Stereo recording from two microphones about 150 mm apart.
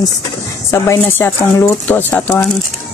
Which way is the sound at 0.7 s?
15° left (ahead or behind).